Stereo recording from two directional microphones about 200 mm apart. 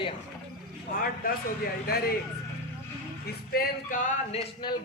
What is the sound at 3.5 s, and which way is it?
Speech, 45° left (ahead or behind).